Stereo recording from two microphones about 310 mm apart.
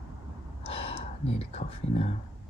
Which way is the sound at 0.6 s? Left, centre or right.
Centre.